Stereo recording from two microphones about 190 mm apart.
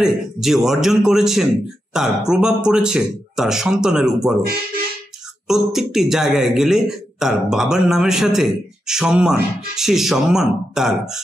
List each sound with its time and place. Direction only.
0.0 s a man's voice: centre (ahead or behind)
5.5 s a man's voice: centre (ahead or behind)